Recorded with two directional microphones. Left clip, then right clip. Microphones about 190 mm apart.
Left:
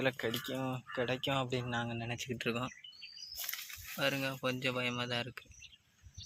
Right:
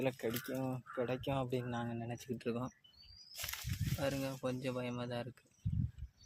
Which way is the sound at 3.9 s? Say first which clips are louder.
Left 5 dB; centre (ahead or behind).